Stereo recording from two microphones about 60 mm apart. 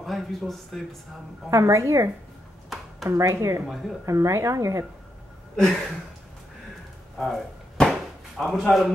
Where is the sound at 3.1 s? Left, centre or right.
Right.